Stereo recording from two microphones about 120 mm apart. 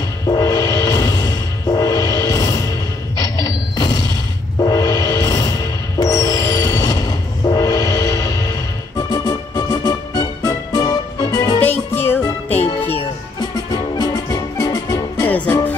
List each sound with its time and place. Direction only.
0.3 s music: 30° left (ahead or behind)
11.6 s music: 15° left (ahead or behind)
13.4 s music: 35° left (ahead or behind)
15.2 s music: 15° left (ahead or behind)